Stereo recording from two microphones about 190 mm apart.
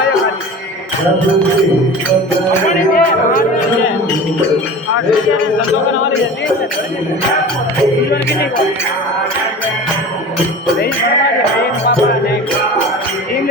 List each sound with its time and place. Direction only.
2.6 s speech: 45° left (ahead or behind)